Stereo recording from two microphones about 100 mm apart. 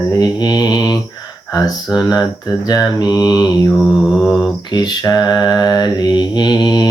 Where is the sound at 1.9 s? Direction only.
40° left (ahead or behind).